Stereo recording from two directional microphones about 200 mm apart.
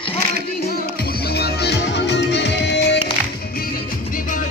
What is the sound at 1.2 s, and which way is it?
Music, 55° left (ahead or behind).